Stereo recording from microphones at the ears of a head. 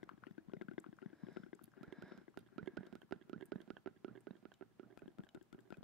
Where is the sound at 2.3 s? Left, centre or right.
Right.